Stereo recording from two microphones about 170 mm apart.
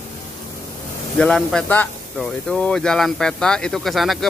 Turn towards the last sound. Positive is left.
turn(degrees=0)  # may be behind; listen again after turning